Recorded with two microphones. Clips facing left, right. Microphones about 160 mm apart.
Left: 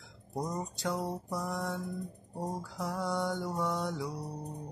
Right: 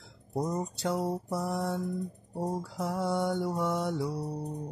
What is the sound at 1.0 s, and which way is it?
Mantra, 30° right (ahead or behind).